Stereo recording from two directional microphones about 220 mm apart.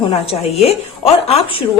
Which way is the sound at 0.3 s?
25° left (ahead or behind).